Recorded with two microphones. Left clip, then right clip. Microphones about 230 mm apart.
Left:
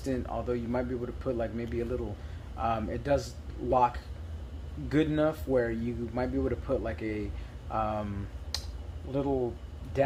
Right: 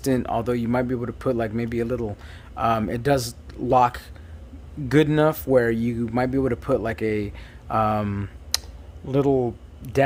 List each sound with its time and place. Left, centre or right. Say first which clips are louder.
0.0 s speech: right 10 dB; right